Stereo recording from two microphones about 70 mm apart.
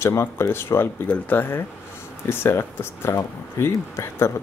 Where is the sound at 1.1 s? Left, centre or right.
Left.